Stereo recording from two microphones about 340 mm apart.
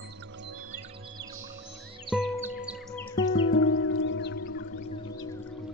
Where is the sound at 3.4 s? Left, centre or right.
Left.